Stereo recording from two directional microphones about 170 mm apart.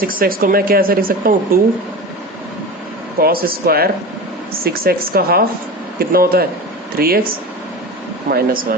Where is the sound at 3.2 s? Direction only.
60° right (ahead or behind).